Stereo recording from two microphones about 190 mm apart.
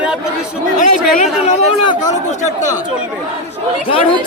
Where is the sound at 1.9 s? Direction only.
20° left (ahead or behind).